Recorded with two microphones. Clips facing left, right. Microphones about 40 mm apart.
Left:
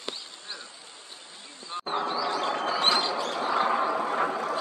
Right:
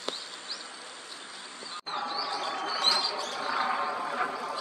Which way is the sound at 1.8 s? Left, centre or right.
Left.